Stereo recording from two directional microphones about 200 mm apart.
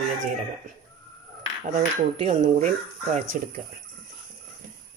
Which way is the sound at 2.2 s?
30° right (ahead or behind).